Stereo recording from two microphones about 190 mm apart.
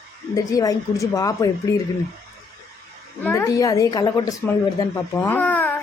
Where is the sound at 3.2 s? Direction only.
15° left (ahead or behind).